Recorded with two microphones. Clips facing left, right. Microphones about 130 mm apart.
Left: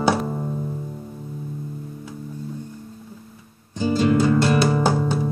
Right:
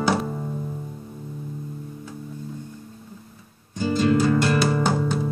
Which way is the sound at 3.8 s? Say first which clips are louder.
Left 2 dB; 20° left (ahead or behind).